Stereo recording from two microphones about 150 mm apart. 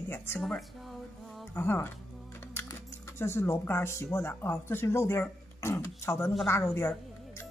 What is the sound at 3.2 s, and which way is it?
Speech, 15° left (ahead or behind).